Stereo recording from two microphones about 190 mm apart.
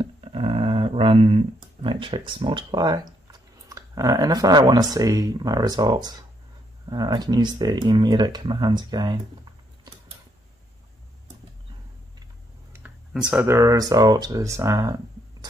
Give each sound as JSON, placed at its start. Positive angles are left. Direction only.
{"t": 0.0, "sound": "a sound", "side_deg": -30}
{"t": 6.9, "sound": "speech", "side_deg": -20}
{"t": 12.7, "sound": "speech", "side_deg": -5}